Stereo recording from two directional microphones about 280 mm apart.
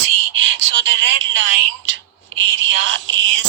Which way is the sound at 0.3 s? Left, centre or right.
Right.